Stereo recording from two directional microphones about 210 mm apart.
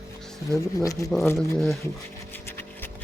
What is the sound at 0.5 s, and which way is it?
Speech, 15° left (ahead or behind).